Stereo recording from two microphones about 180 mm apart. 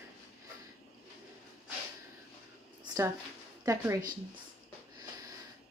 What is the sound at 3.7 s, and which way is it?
Speech, 20° right (ahead or behind).